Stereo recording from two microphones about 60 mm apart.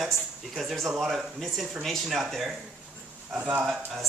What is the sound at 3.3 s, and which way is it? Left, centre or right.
Speech, right.